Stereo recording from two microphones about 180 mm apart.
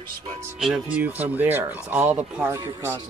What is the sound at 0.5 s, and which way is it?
A man's voice, 5° right (ahead or behind).